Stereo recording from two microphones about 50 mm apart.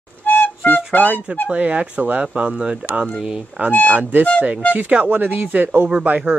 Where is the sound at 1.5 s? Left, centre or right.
Right; by 3.4 s centre.